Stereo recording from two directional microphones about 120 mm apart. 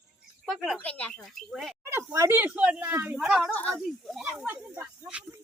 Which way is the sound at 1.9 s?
20° right (ahead or behind).